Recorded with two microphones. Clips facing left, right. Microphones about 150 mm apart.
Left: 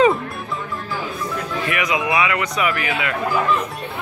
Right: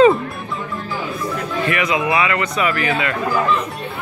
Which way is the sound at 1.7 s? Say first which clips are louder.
Right 2 dB; 15° left (ahead or behind).